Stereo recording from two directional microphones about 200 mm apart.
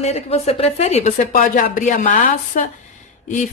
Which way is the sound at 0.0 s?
30° left (ahead or behind).